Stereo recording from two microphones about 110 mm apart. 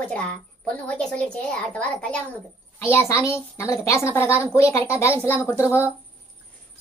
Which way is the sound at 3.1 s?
25° left (ahead or behind).